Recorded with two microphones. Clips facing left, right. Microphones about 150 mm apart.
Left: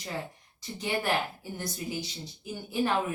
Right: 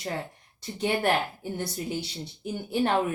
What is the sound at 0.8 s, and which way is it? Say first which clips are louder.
Speech: right 4 dB; 65° right (ahead or behind).